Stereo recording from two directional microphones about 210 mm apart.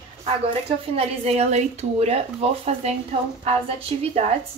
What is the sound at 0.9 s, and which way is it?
Speech, 30° right (ahead or behind).